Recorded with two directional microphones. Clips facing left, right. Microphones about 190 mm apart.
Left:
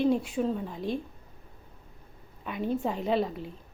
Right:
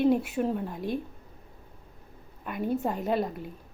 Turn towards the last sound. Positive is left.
turn(degrees=-5)  # may be behind; listen again after turning